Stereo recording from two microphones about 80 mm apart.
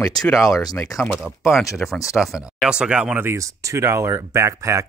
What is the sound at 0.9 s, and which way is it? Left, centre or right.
Speech, left.